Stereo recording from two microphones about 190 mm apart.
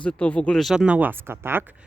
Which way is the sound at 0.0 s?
5° left (ahead or behind).